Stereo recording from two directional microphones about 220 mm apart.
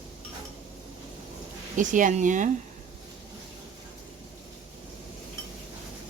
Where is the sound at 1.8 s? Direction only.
35° right (ahead or behind).